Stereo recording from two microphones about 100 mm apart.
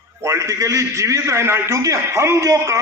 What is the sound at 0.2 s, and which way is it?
A man's voice, 30° right (ahead or behind).